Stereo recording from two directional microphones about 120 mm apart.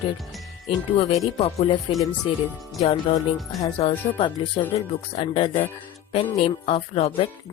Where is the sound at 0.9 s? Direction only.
60° left (ahead or behind).